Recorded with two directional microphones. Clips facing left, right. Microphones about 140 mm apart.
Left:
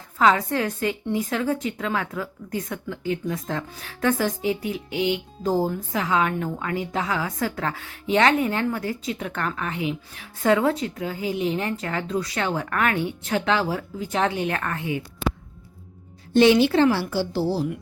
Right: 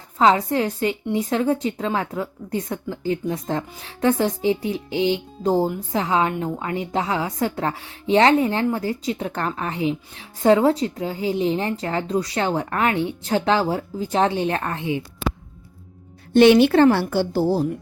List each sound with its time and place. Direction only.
0.2 s a woman's voice: 25° right (ahead or behind)
16.3 s a woman's voice: 60° right (ahead or behind)